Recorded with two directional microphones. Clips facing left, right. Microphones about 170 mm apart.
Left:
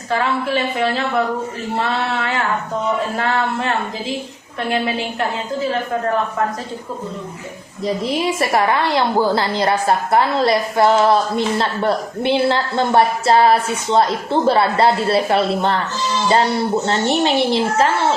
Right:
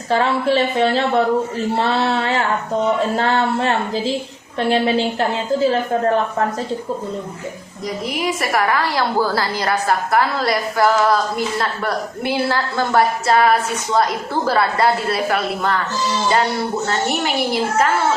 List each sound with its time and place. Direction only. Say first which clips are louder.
0.1 s a woman's voice: right 3 dB; 30° right (ahead or behind)
7.9 s a woman's voice: left 3 dB; 25° left (ahead or behind)
16.8 s a woman's voice: left 3 dB; 25° left (ahead or behind)